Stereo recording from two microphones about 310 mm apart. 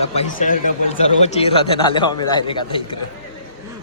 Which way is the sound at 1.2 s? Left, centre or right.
Centre.